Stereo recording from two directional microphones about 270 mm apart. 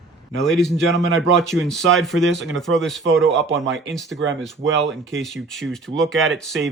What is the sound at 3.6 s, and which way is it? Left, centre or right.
Speech, right.